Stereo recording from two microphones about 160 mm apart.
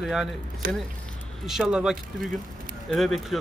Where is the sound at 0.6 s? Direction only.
60° right (ahead or behind).